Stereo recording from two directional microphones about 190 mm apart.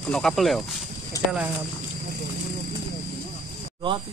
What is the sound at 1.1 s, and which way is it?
Speech, 15° left (ahead or behind).